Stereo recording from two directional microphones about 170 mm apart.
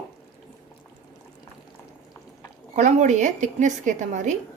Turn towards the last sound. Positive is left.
turn(degrees=-45)  # may be behind; listen again after turning